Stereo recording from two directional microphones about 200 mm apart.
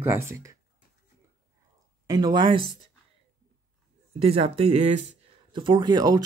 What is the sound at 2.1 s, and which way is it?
Speech, 20° right (ahead or behind).